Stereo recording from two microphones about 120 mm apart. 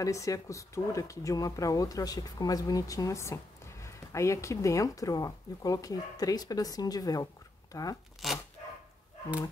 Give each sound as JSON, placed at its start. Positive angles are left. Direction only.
{"t": 0.0, "sound": "speech", "side_deg": 25}
{"t": 8.2, "sound": "dog", "side_deg": 0}